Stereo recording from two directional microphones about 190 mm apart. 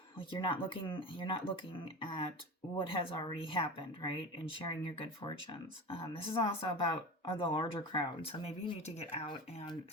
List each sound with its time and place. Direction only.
0.2 s speech: 25° left (ahead or behind)
2.7 s speech: 25° left (ahead or behind)